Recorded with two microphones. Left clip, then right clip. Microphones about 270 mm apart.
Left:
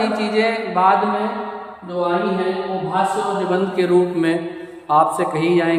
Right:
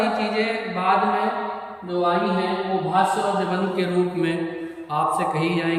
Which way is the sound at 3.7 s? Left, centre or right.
Centre.